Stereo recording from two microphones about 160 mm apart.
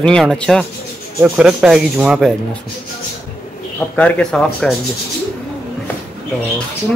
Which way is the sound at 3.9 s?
5° left (ahead or behind).